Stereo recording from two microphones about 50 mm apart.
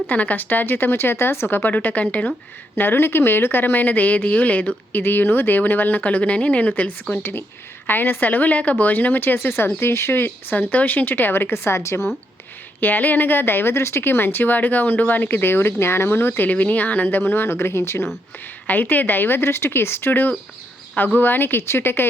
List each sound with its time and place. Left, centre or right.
0.1 s a woman's voice: left
1.5 s a woman's voice: left
2.7 s a woman's voice: left
7.1 s a woman's voice: left
11.5 s speech: left
12.8 s speech: left
16.5 s speech: left
18.7 s a woman's voice: left